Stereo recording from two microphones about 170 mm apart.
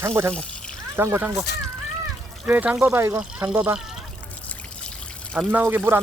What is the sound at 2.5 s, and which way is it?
Speech, 10° right (ahead or behind).